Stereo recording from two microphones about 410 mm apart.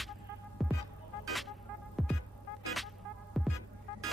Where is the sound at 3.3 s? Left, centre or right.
Centre.